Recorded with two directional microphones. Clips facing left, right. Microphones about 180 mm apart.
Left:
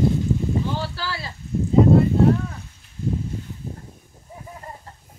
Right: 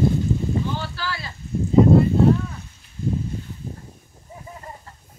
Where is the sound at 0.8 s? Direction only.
35° left (ahead or behind).